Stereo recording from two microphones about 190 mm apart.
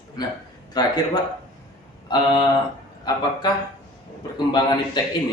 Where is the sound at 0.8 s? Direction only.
20° left (ahead or behind).